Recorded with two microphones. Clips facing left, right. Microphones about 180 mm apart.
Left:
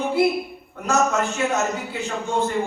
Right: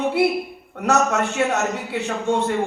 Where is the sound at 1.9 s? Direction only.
70° right (ahead or behind).